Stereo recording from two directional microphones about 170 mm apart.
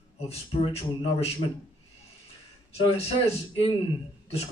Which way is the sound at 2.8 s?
35° left (ahead or behind).